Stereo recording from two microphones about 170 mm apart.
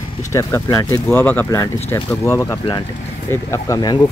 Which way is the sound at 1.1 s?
10° left (ahead or behind).